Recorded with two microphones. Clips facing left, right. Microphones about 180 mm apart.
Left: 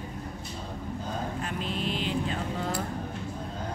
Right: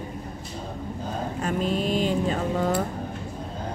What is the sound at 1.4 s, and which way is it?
Vehicle, 45° right (ahead or behind).